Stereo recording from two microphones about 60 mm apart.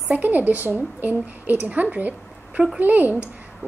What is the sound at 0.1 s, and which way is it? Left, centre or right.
A woman's voice, right.